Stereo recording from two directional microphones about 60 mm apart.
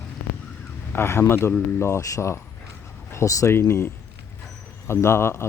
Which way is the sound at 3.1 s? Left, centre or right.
Left.